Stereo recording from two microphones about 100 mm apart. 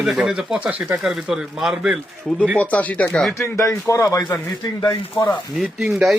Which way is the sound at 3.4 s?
30° left (ahead or behind).